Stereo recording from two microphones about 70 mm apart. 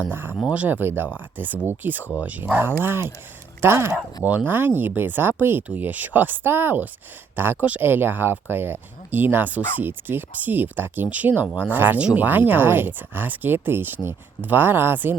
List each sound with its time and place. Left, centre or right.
0.1 s speech: right
4.2 s speech: right